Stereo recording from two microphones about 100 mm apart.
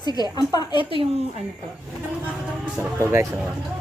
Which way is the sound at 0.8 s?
65° right (ahead or behind).